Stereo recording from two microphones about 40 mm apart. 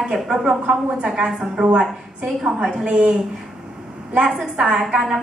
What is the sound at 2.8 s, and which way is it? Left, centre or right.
Speech, right.